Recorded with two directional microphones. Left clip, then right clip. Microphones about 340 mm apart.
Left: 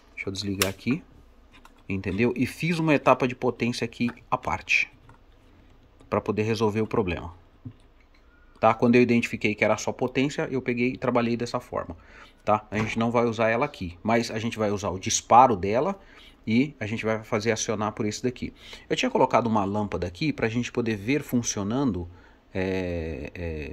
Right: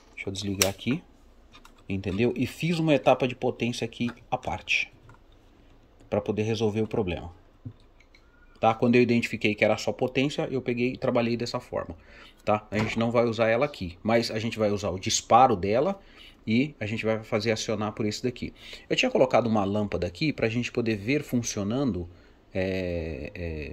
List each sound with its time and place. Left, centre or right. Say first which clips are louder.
0.1 s speech: left 2 dB; left
1.9 s speech: left 1 dB; centre
6.0 s speech: left 2 dB; centre
8.5 s speech: left 2 dB; centre